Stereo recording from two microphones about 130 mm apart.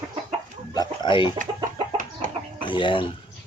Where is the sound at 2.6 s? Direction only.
40° left (ahead or behind).